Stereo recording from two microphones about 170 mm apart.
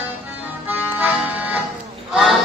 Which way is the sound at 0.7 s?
10° right (ahead or behind).